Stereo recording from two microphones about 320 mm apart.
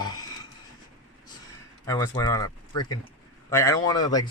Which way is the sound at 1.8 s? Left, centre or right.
Centre.